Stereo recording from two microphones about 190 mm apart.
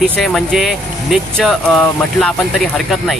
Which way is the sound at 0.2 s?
Centre (ahead or behind).